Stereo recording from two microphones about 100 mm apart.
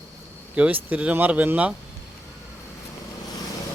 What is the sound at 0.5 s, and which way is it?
A man's voice, 15° right (ahead or behind).